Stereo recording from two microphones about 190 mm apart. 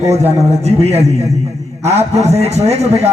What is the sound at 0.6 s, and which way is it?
A man's voice, 35° right (ahead or behind).